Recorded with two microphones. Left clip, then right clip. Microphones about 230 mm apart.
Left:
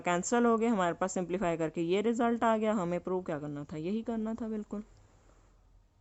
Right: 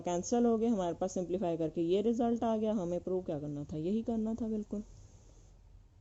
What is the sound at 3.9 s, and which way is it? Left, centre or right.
Speech, centre.